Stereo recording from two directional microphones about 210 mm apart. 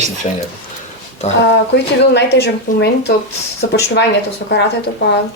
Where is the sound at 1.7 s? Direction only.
55° left (ahead or behind).